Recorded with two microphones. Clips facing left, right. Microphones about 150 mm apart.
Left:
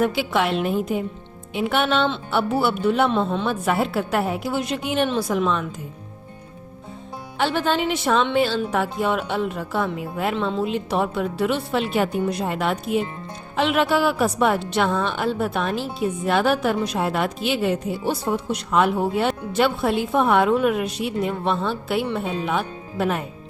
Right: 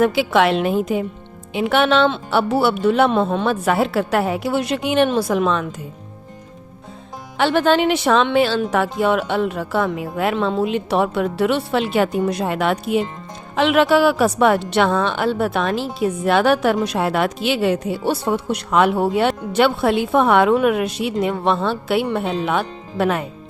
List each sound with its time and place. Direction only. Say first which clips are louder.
0.0 s a woman's voice: right 5 dB; 90° right
5.0 s a woman's voice: right 4 dB; 60° right (ahead or behind); by 5.6 s 85° right
7.3 s a woman's voice: right 6 dB; 75° right (ahead or behind); by 10.3 s 90° right
10.6 s a woman's voice: right 4 dB; 70° right (ahead or behind); by 23.2 s 90° right